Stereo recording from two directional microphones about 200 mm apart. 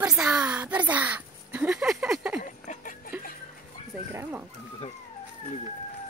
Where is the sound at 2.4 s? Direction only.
40° left (ahead or behind).